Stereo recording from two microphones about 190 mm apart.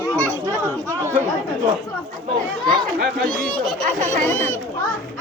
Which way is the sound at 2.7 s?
50° right (ahead or behind).